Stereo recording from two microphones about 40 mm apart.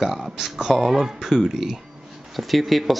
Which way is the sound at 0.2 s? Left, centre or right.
Centre.